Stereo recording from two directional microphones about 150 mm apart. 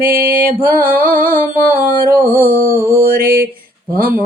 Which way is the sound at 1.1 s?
70° right (ahead or behind).